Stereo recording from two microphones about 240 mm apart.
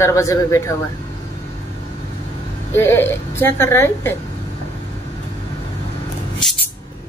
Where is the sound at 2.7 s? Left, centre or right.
Centre.